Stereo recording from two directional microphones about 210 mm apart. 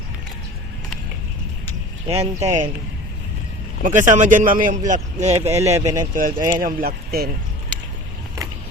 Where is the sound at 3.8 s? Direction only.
35° right (ahead or behind).